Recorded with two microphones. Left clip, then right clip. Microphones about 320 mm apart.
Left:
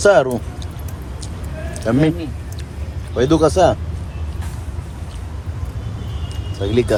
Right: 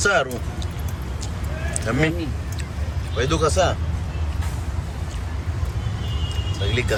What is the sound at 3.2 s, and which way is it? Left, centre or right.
Speech, centre.